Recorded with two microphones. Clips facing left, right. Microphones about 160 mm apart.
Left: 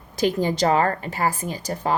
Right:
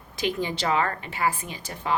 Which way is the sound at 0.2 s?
40° left (ahead or behind).